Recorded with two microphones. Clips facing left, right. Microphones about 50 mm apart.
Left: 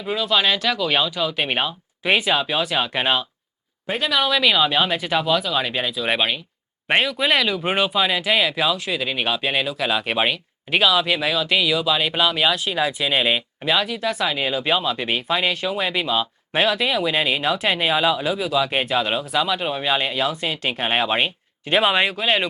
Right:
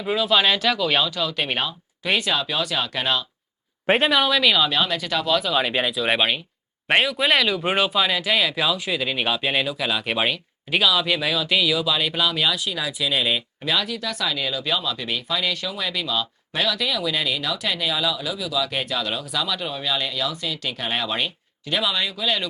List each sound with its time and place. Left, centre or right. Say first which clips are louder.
0.0 s speech: right 1 dB; centre; by 3.2 s left
4.1 s speech: even; centre
4.7 s speech: left 3 dB; centre
5.3 s speech: even; centre; by 22.4 s left